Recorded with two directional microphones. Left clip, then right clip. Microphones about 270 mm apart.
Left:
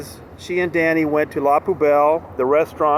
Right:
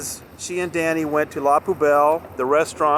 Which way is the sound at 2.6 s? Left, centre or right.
Right.